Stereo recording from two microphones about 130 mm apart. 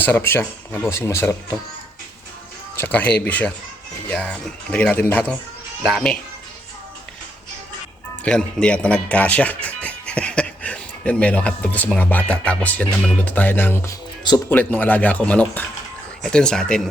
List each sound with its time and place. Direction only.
0.0 s speech: 15° left (ahead or behind)
2.7 s speech: 15° left (ahead or behind)
8.2 s speech: 10° left (ahead or behind)